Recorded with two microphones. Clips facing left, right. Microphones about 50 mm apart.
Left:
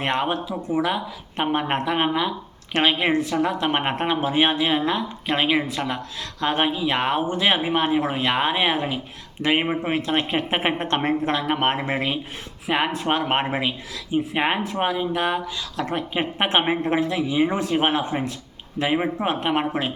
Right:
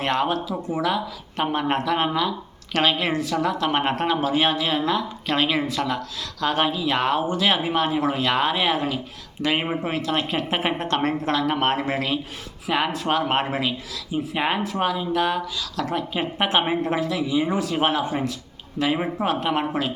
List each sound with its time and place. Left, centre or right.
0.0 s speech: left
18.8 s speech: centre
19.2 s speech: left